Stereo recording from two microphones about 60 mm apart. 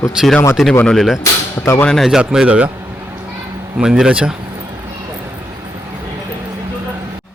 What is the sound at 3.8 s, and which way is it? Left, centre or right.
Speech, centre.